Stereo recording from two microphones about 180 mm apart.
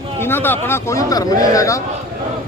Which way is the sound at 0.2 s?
10° left (ahead or behind).